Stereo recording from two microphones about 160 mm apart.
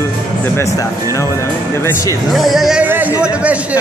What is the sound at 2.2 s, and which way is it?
Speech, centre (ahead or behind).